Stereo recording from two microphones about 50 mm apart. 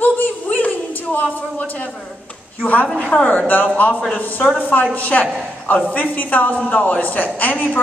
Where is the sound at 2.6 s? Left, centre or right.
Left.